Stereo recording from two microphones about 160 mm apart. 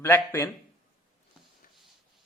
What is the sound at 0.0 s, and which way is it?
Speech, 15° left (ahead or behind).